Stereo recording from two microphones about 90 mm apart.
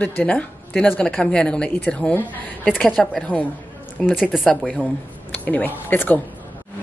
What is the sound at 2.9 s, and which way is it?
Speech, centre (ahead or behind).